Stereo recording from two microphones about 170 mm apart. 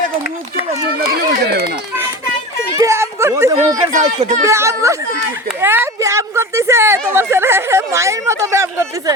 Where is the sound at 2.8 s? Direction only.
15° right (ahead or behind).